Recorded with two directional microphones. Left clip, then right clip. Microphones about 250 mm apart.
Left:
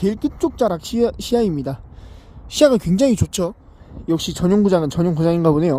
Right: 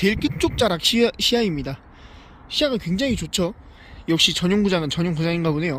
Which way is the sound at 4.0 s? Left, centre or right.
Centre.